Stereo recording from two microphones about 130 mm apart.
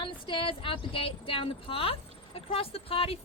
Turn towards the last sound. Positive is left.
turn(degrees=45)  # may be behind; listen again after turning